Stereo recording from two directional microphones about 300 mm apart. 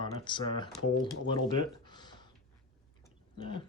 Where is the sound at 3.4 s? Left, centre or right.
Centre.